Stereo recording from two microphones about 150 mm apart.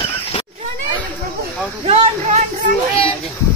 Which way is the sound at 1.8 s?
45° right (ahead or behind).